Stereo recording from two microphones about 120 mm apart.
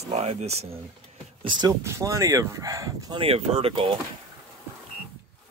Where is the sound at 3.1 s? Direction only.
55° right (ahead or behind).